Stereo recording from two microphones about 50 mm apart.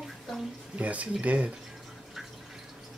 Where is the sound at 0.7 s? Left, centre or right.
Right.